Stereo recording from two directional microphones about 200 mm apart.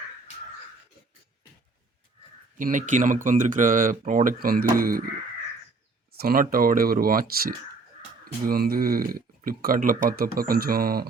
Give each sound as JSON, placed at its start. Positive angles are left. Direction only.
{"t": 2.6, "sound": "speech", "side_deg": -40}
{"t": 6.1, "sound": "speech", "side_deg": -45}